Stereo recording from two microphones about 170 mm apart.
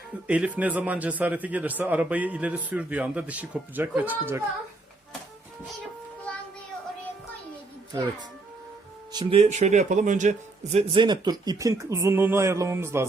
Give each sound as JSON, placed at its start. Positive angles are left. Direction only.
{"t": 0.3, "sound": "speech", "side_deg": -5}
{"t": 9.1, "sound": "a man's voice", "side_deg": -35}
{"t": 10.9, "sound": "speech", "side_deg": -25}